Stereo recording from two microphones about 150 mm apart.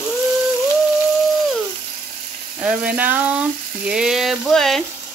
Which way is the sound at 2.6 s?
10° right (ahead or behind).